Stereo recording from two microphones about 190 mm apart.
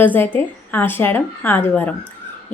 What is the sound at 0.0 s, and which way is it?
Speech, 10° left (ahead or behind).